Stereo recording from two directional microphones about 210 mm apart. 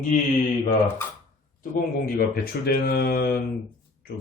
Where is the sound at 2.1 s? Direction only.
45° left (ahead or behind).